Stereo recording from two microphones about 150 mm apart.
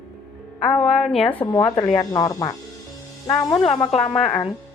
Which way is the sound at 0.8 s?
40° left (ahead or behind).